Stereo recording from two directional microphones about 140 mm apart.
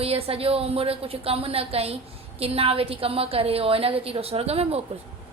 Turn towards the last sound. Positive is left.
turn(degrees=-45)  # may be behind; listen again after turning